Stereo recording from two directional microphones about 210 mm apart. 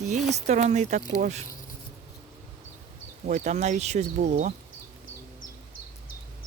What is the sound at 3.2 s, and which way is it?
Speech, 35° right (ahead or behind).